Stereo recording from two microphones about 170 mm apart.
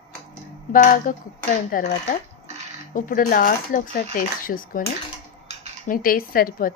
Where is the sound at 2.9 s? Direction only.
50° left (ahead or behind).